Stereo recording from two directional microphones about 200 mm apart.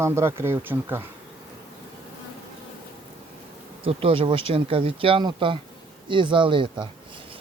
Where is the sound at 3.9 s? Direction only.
30° right (ahead or behind).